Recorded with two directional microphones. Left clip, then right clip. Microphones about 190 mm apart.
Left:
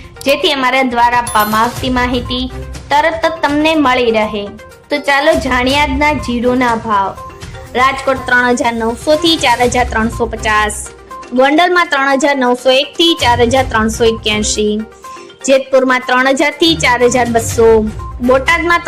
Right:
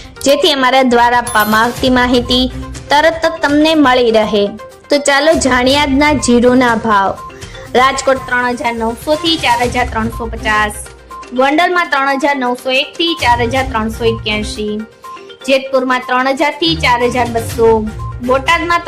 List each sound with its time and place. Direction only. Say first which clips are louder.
0.2 s a woman's voice: right 2 dB; 30° right (ahead or behind)
8.3 s a woman's voice: left 3 dB; 25° left (ahead or behind)